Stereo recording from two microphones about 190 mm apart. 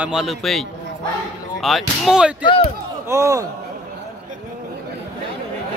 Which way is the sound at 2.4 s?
30° left (ahead or behind).